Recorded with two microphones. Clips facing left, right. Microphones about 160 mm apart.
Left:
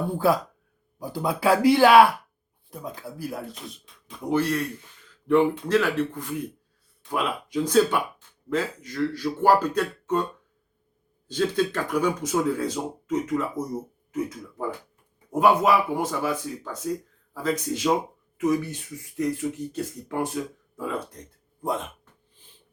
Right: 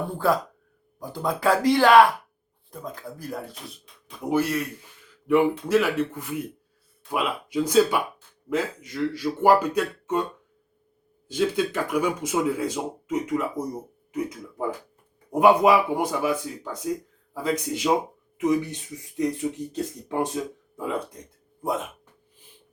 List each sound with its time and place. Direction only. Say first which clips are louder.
0.1 s speech: left 1 dB; 10° left (ahead or behind); by 10.2 s 10° right (ahead or behind)
11.3 s speech: even; 10° right (ahead or behind)